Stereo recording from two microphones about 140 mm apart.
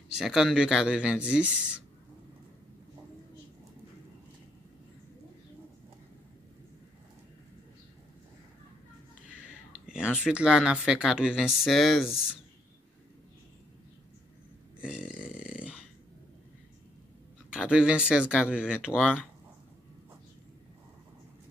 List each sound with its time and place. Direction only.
0.2 s speech: 5° right (ahead or behind)
9.8 s speech: 5° right (ahead or behind)
14.8 s a sound: 5° right (ahead or behind)
17.5 s speech: 5° right (ahead or behind)